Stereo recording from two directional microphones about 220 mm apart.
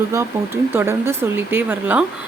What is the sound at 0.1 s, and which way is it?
Speech, 10° right (ahead or behind).